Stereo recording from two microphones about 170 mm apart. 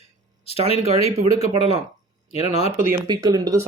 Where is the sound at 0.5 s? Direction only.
35° left (ahead or behind).